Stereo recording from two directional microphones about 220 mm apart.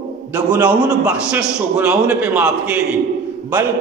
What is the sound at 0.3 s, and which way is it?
A man's voice, 5° right (ahead or behind).